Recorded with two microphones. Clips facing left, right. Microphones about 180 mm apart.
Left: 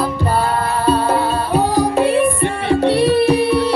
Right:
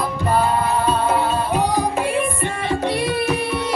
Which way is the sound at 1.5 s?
30° left (ahead or behind).